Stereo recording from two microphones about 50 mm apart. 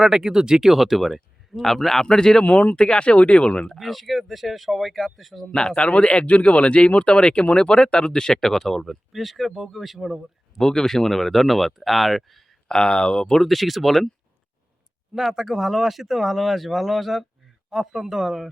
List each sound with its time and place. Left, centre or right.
0.0 s speech: centre
2.4 s speech: left
2.7 s speech: centre
3.8 s speech: centre
5.5 s speech: centre
10.6 s speech: centre
12.6 s speech: centre
13.3 s speech: centre
15.1 s speech: centre